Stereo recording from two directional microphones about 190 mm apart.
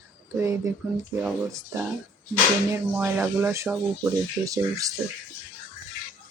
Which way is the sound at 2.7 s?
10° right (ahead or behind).